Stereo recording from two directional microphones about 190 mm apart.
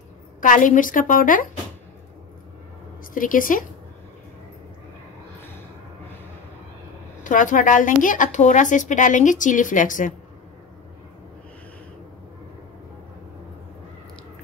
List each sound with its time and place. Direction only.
0.4 s a woman's voice: 45° left (ahead or behind)
3.2 s a woman's voice: 45° left (ahead or behind)
7.2 s a woman's voice: 45° left (ahead or behind)